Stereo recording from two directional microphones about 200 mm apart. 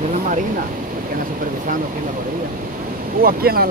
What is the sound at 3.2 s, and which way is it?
Speech, 45° right (ahead or behind).